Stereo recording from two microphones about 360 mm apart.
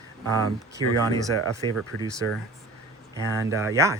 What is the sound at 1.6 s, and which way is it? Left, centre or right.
Speech, centre.